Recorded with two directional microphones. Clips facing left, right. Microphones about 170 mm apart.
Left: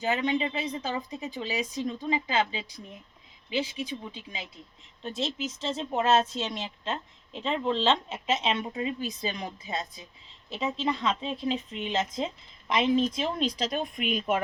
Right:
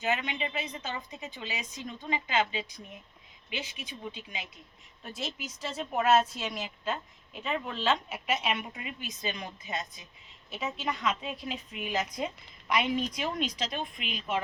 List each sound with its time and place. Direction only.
0.0 s speech: 35° left (ahead or behind); by 14.4 s 50° left (ahead or behind)